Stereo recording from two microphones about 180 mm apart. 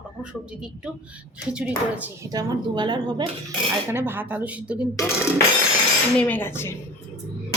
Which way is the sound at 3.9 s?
10° right (ahead or behind).